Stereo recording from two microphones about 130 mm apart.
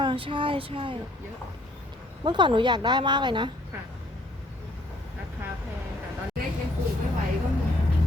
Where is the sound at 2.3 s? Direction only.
35° right (ahead or behind).